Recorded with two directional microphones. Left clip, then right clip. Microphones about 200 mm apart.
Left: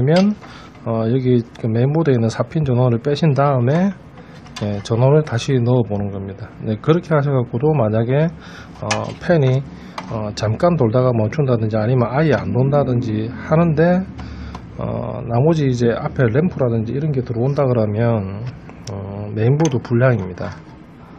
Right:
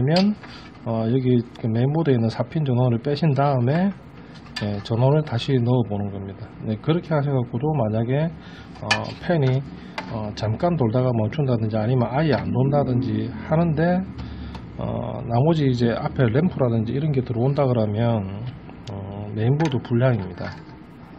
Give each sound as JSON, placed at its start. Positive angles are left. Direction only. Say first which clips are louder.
{"t": 0.8, "sound": "a man's voice", "louder": "left 4 dB", "side_deg": 10}